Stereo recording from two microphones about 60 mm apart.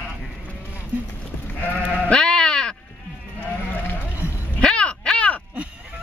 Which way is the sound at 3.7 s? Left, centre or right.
Left.